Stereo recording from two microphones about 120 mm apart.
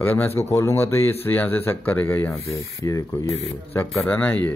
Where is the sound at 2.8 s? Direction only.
30° left (ahead or behind).